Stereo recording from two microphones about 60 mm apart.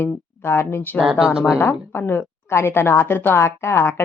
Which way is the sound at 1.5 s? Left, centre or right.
Left.